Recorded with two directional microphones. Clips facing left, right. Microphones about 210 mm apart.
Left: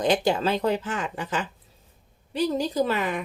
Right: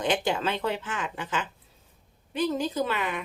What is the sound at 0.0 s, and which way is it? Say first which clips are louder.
A woman's voice: left 4 dB; 35° left (ahead or behind).